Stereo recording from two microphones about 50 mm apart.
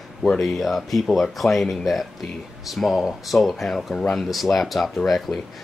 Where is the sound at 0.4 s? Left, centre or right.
Centre.